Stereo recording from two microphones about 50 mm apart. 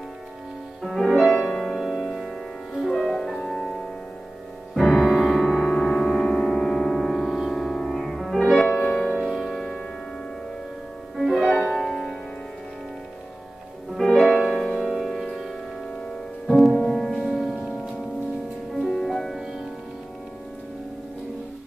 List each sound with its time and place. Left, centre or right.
0.8 s music: centre
9.1 s music: centre
11.1 s music: centre
13.9 s music: centre